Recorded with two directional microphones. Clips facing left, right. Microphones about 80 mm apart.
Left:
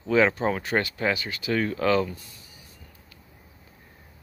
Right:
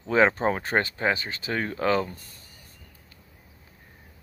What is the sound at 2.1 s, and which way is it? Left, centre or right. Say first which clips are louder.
Speech: left 2 dB; right.